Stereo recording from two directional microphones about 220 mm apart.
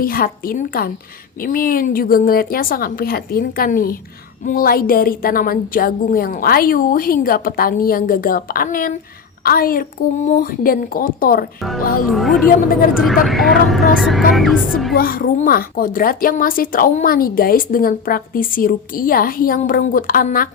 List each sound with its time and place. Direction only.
0.0 s a woman's voice: 40° left (ahead or behind)
12.1 s speech: centre (ahead or behind)
12.5 s speech: 40° left (ahead or behind)
13.2 s speech: centre (ahead or behind)
14.9 s speech: 40° left (ahead or behind)